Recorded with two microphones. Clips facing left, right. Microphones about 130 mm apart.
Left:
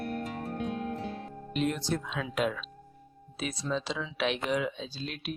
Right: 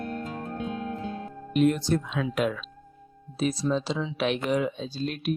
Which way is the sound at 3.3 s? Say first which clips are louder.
Right 7 dB; 35° right (ahead or behind).